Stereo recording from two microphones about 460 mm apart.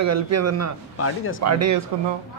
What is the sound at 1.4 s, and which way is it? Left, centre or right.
Speech, right.